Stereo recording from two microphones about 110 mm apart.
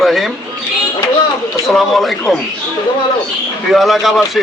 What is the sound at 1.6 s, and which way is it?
Speech, centre (ahead or behind).